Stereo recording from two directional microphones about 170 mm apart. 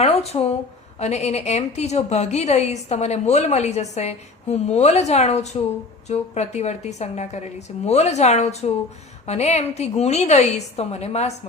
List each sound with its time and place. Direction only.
0.0 s a woman's voice: 35° left (ahead or behind)